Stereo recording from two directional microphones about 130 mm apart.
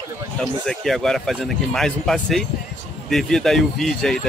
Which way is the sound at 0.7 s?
Centre (ahead or behind).